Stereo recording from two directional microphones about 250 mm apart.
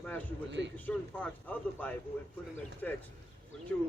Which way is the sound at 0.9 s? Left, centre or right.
Centre.